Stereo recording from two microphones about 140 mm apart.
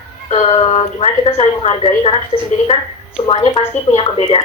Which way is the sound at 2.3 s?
45° left (ahead or behind).